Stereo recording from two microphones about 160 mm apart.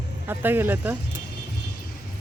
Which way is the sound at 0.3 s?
10° right (ahead or behind).